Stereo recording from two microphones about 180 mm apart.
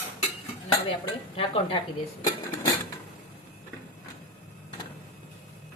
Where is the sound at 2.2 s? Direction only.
20° left (ahead or behind).